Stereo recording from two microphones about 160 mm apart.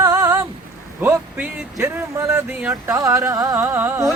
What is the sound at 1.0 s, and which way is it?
Speech, 10° right (ahead or behind).